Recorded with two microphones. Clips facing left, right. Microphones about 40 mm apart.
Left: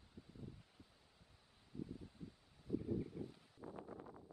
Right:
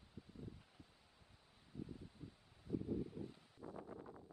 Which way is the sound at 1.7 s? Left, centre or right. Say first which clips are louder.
Left 2 dB; right.